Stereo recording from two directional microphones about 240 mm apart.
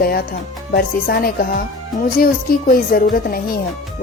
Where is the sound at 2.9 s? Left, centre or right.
Left.